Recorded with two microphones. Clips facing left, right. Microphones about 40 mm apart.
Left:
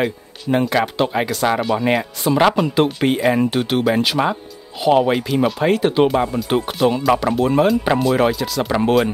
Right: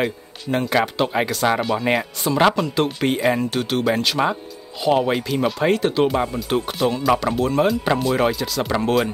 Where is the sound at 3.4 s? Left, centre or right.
Centre.